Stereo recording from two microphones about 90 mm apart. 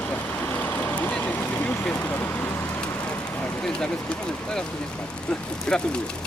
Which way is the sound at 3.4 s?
10° left (ahead or behind).